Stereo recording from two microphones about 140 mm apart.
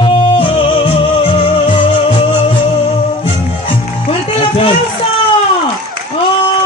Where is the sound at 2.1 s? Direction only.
40° left (ahead or behind).